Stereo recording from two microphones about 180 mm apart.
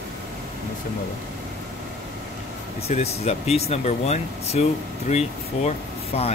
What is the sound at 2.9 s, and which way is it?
Speech, 35° left (ahead or behind).